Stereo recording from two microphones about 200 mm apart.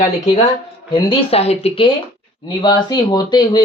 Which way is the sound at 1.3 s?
30° left (ahead or behind).